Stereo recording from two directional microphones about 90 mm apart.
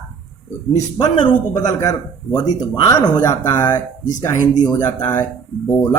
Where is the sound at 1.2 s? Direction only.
50° left (ahead or behind).